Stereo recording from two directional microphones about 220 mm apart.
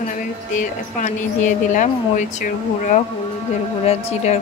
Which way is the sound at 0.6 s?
35° left (ahead or behind).